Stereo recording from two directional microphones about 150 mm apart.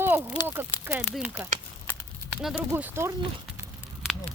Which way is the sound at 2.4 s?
5° right (ahead or behind).